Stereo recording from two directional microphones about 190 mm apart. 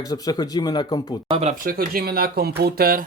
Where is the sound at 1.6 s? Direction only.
50° right (ahead or behind).